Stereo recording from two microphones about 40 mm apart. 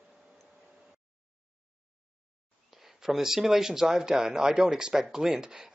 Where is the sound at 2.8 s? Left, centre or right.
Centre.